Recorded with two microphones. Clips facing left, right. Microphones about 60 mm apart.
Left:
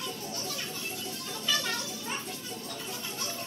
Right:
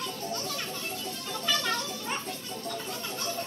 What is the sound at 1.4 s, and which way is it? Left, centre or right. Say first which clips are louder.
Music: right 2 dB; right.